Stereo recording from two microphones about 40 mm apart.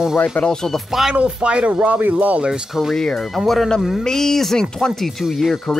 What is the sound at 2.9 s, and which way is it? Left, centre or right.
Speech, centre.